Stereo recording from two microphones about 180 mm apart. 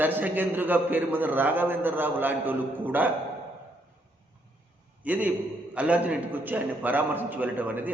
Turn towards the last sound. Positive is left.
turn(degrees=-10)  # may be behind; listen again after turning